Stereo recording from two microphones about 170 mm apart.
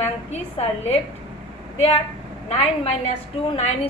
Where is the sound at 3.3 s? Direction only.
35° left (ahead or behind).